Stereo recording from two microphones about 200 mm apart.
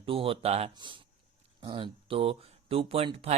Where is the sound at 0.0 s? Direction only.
25° right (ahead or behind).